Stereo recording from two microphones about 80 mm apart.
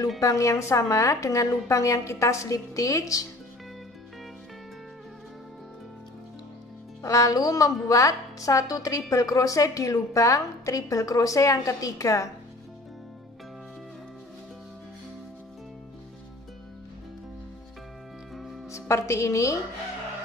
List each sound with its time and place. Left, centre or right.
0.2 s a woman's voice: left
7.0 s a woman's voice: left
18.3 s music: centre
18.7 s a woman's voice: left